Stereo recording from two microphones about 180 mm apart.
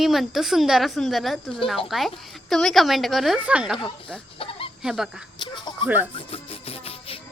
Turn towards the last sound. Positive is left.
turn(degrees=30)  # may be behind; listen again after turning